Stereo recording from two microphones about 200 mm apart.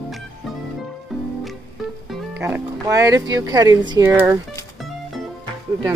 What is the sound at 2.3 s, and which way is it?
Speech, 10° right (ahead or behind).